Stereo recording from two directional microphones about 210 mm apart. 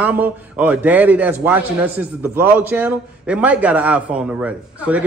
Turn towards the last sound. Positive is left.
turn(degrees=-5)  # may be behind; listen again after turning